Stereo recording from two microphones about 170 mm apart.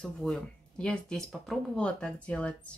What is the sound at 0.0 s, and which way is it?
Speech, 5° left (ahead or behind).